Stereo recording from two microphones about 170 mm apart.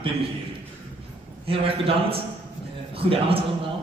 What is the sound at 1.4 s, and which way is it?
A man's voice, 35° right (ahead or behind).